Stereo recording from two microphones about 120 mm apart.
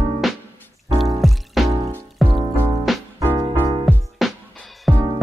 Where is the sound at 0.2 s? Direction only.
Centre (ahead or behind).